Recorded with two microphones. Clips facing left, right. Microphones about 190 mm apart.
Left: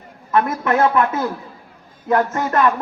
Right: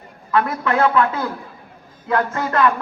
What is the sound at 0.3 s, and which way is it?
Speech, 20° left (ahead or behind).